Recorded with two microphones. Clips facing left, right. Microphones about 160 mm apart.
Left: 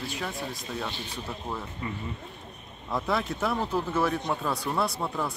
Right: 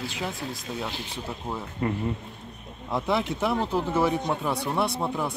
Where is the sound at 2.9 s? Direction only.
20° right (ahead or behind).